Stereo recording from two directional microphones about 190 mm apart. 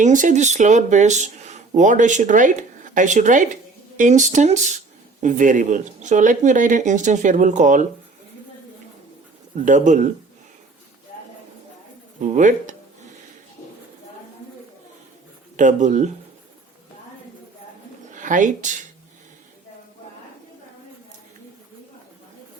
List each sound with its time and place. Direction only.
0.0 s speech: 40° right (ahead or behind)
9.6 s speech: 40° right (ahead or behind)
12.2 s speech: 40° right (ahead or behind)
15.5 s speech: 40° right (ahead or behind)
18.1 s speech: 45° right (ahead or behind)